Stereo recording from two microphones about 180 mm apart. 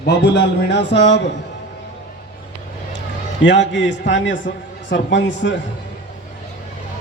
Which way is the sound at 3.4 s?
85° left.